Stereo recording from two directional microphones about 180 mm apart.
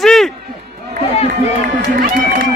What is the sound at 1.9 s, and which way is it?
Speech, 50° right (ahead or behind).